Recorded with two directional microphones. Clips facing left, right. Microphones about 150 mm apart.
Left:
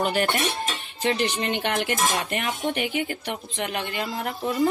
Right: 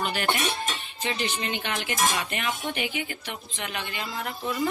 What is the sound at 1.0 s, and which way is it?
A woman's voice, 60° left (ahead or behind).